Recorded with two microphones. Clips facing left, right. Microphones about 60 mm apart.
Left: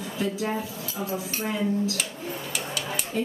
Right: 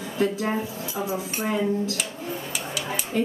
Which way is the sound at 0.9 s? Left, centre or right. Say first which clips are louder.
Right 2 dB; right.